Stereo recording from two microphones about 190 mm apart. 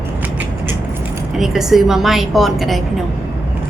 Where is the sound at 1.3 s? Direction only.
Centre (ahead or behind).